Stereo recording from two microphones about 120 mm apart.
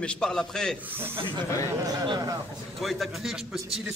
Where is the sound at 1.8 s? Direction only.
35° right (ahead or behind).